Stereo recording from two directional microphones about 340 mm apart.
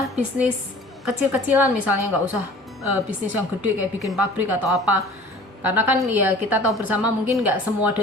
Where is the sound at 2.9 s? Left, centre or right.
Right.